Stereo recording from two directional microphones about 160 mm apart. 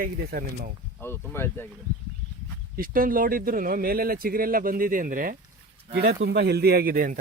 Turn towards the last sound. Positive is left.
turn(degrees=-60)  # may be behind; listen again after turning